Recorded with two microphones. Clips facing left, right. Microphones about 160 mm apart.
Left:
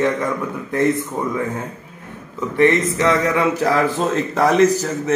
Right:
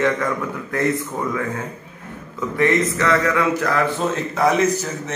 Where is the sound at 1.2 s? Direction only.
20° left (ahead or behind).